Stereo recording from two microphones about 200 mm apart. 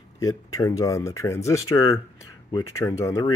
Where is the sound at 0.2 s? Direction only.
15° left (ahead or behind).